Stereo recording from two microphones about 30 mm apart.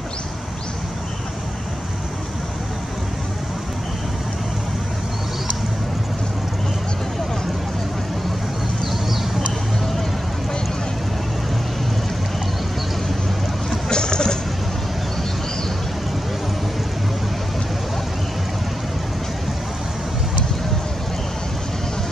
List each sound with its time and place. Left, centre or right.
13.8 s vehicle: left